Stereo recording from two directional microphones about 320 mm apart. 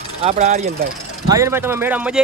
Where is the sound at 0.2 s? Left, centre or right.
Centre.